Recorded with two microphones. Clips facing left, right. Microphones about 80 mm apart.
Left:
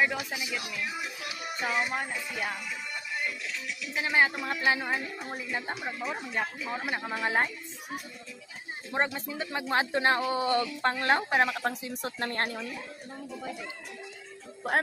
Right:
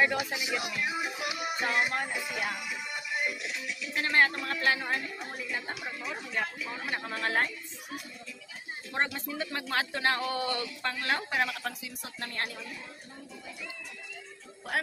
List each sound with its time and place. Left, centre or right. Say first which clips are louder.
0.0 s music: right 1 dB; centre
0.3 s speech: right 2 dB; centre
1.0 s music: right 4 dB; centre
1.6 s music: even; centre
2.9 s music: right 2 dB; centre
3.6 s speech: left 1 dB; centre
5.3 s speech: left 3 dB; left
8.9 s speech: left 2 dB; centre; by 12.5 s left